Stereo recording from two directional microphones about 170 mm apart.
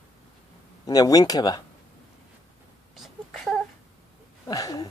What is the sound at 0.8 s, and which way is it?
Speech, 20° left (ahead or behind).